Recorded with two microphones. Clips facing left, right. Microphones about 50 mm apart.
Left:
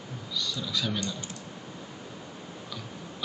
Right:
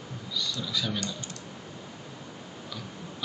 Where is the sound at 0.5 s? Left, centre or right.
Centre.